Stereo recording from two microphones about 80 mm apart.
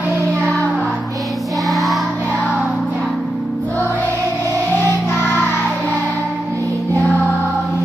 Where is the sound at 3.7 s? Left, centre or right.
Left.